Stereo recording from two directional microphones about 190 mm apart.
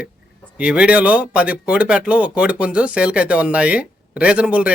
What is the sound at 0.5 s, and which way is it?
Speech, 5° right (ahead or behind).